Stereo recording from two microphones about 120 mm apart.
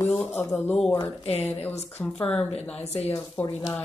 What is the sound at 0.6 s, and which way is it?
Speech, 5° left (ahead or behind).